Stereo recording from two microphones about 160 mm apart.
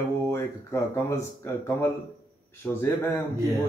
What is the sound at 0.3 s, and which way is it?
Speech, 15° left (ahead or behind).